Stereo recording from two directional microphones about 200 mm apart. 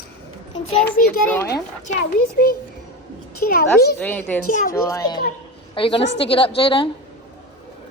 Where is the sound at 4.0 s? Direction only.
10° left (ahead or behind).